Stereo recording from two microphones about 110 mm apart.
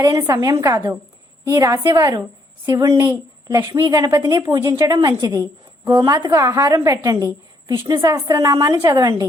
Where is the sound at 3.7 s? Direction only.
50° right (ahead or behind).